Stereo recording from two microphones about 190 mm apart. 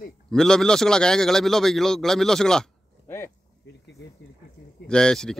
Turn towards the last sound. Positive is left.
turn(degrees=5)  # may be behind; listen again after turning